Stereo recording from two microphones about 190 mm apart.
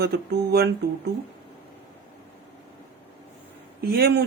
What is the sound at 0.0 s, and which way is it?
Speech, 55° right (ahead or behind).